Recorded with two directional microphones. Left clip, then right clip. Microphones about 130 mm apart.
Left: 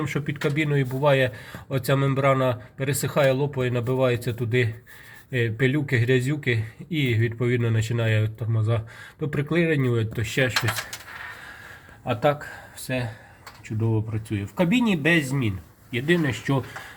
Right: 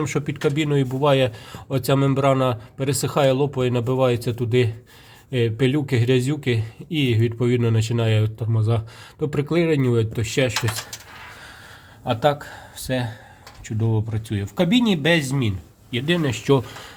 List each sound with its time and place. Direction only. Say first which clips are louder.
0.0 s speech: right 4 dB; 45° right (ahead or behind)
12.0 s speech: right 3 dB; 45° right (ahead or behind)
13.8 s speech: right 1 dB; 45° right (ahead or behind)